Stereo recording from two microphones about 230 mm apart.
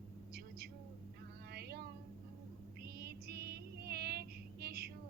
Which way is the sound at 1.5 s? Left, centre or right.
Right.